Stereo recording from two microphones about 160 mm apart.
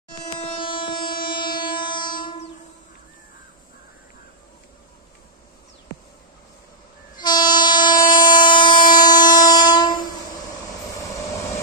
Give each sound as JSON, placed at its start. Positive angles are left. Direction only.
{"t": 0.6, "sound": "train", "side_deg": 30}
{"t": 7.2, "sound": "train", "side_deg": 25}